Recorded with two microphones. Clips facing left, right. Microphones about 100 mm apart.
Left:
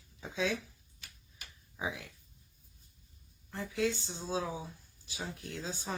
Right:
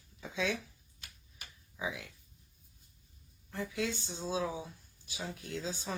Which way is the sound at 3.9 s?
25° right (ahead or behind).